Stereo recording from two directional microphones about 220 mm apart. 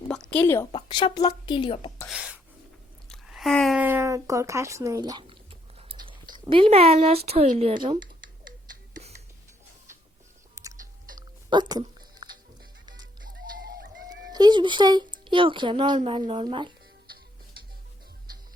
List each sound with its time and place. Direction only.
0.1 s a sound: 5° left (ahead or behind)
0.7 s speech: 20° left (ahead or behind)
2.0 s a sound: 5° right (ahead or behind); by 6.1 s 25° right (ahead or behind)
6.5 s speech: 25° right (ahead or behind)
7.7 s speech: 20° right (ahead or behind)
10.5 s music: 15° right (ahead or behind)
11.4 s a sound: 20° right (ahead or behind)
13.2 s music: 40° right (ahead or behind)
14.3 s speech: 20° right (ahead or behind)